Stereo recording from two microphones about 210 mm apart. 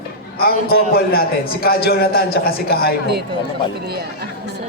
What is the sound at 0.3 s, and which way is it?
A man's voice, 45° left (ahead or behind).